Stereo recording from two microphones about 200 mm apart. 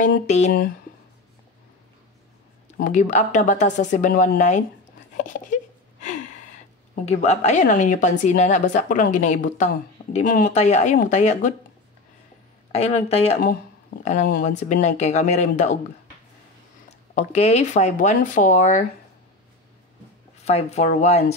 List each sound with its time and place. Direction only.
0.0 s a woman's voice: 35° left (ahead or behind)
2.8 s a woman's voice: 40° left (ahead or behind)
5.1 s a sound: 40° left (ahead or behind)
7.1 s a woman's voice: 35° left (ahead or behind)
12.7 s a woman's voice: 30° left (ahead or behind)
13.4 s a woman's voice: 45° left (ahead or behind)
17.1 s a woman's voice: 35° left (ahead or behind)
20.4 s a woman's voice: 35° left (ahead or behind)